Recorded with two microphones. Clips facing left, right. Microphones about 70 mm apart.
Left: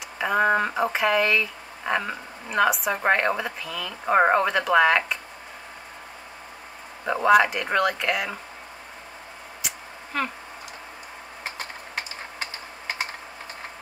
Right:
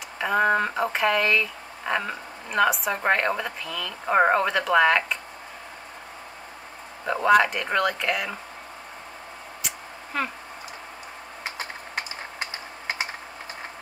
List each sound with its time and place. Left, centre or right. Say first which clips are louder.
0.2 s speech: even; centre
7.1 s speech: left 1 dB; centre
9.6 s a sound: left 1 dB; centre